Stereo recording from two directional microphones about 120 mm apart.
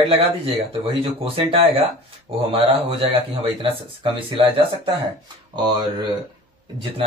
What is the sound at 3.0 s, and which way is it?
Speech, 50° right (ahead or behind).